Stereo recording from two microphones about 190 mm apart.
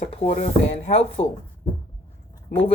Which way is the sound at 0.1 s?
30° left (ahead or behind).